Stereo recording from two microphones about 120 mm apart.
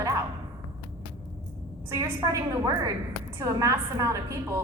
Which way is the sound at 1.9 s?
25° right (ahead or behind).